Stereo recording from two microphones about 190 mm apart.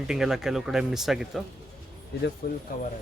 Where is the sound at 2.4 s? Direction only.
55° left (ahead or behind).